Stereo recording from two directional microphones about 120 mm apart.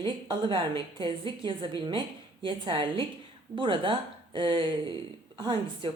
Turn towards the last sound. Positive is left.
turn(degrees=-40)  # may be behind; listen again after turning